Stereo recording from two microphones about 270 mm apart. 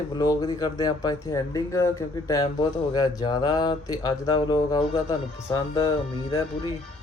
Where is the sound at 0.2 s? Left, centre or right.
Centre.